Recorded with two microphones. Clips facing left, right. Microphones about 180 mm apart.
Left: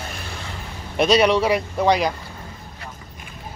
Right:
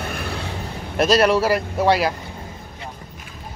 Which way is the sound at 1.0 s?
Centre (ahead or behind).